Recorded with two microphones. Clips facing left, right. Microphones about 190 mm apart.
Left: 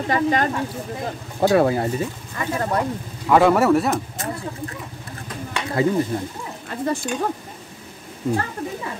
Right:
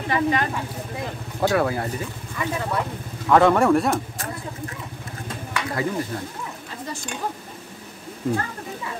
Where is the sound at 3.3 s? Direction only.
5° left (ahead or behind).